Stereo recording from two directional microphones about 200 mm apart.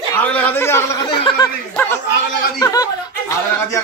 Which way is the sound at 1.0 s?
25° left (ahead or behind).